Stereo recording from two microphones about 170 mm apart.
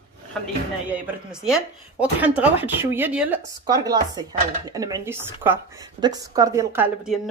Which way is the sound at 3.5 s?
20° right (ahead or behind).